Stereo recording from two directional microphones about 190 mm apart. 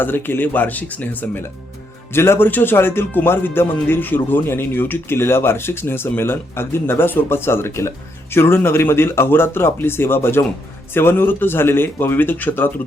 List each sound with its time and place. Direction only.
0.0 s speech: 10° left (ahead or behind)